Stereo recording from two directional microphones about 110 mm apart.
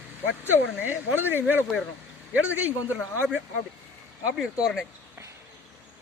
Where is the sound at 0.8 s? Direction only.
15° right (ahead or behind).